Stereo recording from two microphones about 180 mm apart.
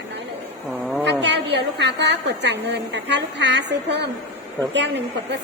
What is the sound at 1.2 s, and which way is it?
A woman's voice, 75° right (ahead or behind).